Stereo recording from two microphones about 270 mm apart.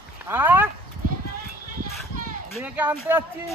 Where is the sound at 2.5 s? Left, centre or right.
Centre.